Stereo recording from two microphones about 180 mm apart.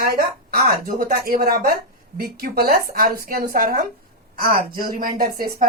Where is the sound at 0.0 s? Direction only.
55° right (ahead or behind).